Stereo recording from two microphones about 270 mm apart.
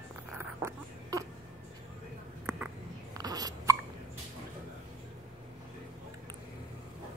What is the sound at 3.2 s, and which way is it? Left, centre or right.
Hiccup, centre.